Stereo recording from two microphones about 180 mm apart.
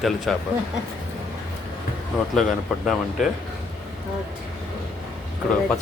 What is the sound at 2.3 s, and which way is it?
Speech, centre (ahead or behind).